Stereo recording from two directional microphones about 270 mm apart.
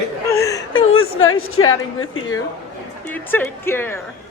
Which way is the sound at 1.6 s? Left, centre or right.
Left.